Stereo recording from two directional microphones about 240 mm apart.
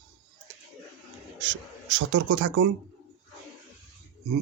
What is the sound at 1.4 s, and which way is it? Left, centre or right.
Speech, right.